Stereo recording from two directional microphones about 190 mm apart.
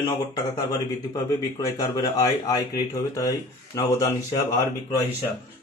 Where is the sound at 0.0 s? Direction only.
20° left (ahead or behind).